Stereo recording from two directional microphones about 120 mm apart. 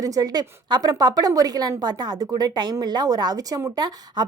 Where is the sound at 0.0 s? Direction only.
30° right (ahead or behind).